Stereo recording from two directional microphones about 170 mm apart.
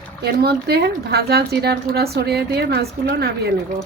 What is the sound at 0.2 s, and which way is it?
Speech, 70° right (ahead or behind).